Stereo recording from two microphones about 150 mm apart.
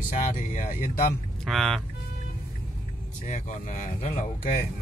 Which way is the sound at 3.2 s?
55° left (ahead or behind).